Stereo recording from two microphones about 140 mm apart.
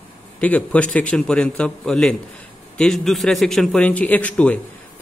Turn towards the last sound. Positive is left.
turn(degrees=10)  # may be behind; listen again after turning